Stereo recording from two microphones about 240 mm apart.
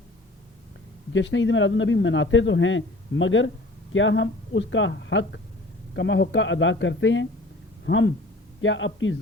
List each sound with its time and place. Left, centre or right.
1.1 s a man's voice: left